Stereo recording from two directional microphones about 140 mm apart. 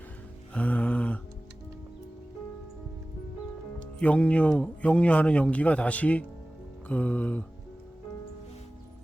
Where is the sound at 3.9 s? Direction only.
10° left (ahead or behind).